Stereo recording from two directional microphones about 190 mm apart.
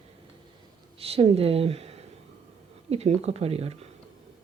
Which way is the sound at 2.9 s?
35° right (ahead or behind).